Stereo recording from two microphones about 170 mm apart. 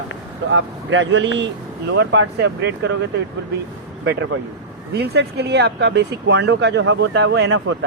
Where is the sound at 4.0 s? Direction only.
90° right.